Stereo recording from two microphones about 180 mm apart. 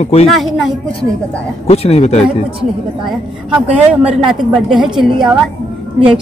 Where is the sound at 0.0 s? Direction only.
35° left (ahead or behind).